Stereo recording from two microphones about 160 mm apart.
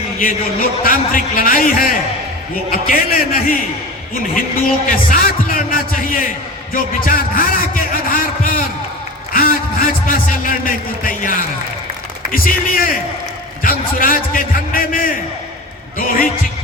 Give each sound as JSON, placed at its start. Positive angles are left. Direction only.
{"t": 0.8, "sound": "a man's voice", "side_deg": 60}
{"t": 4.9, "sound": "a man's voice", "side_deg": 60}
{"t": 6.7, "sound": "a sound", "side_deg": 60}
{"t": 9.3, "sound": "a man's voice", "side_deg": 60}